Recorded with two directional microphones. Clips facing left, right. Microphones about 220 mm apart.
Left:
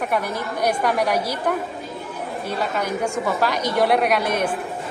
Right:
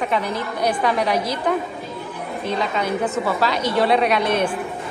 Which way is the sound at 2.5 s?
10° left (ahead or behind).